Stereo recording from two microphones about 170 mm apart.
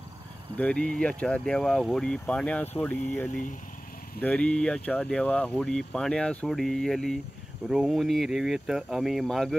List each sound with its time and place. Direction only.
0.6 s speech: 5° left (ahead or behind)
3.3 s speech: 50° left (ahead or behind)
4.2 s speech: 5° left (ahead or behind)